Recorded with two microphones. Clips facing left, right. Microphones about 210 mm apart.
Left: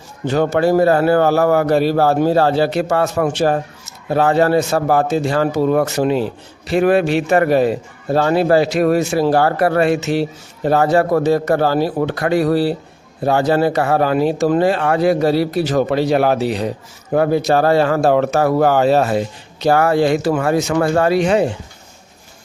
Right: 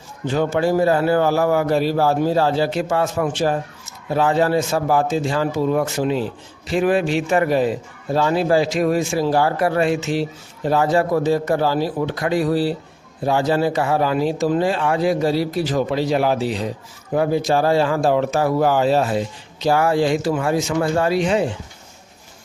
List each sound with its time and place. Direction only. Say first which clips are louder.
0.3 s a man's voice: left 4 dB; 65° left (ahead or behind)